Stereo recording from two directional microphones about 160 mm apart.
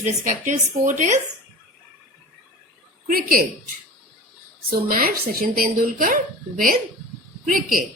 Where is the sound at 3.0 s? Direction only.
70° right (ahead or behind).